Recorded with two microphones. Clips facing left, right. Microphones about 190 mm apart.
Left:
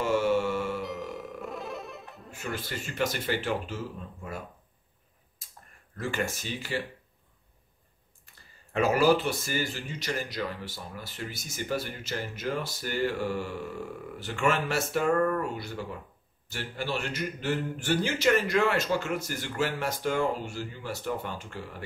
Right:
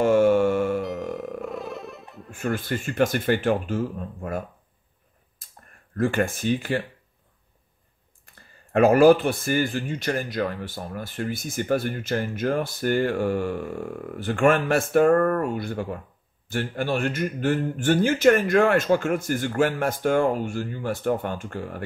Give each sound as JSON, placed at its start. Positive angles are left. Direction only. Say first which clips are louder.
{"t": 0.0, "sound": "music", "louder": "right 8 dB", "side_deg": -50}
{"t": 1.4, "sound": "music", "louder": "right 5 dB", "side_deg": 0}
{"t": 2.3, "sound": "speech", "louder": "right 9 dB", "side_deg": -50}
{"t": 5.4, "sound": "a sound", "louder": "even", "side_deg": -55}
{"t": 5.9, "sound": "speech", "louder": "right 8 dB", "side_deg": -55}
{"t": 8.7, "sound": "speech", "louder": "right 8 dB", "side_deg": -55}